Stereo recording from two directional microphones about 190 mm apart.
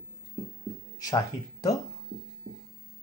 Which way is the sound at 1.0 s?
20° left (ahead or behind).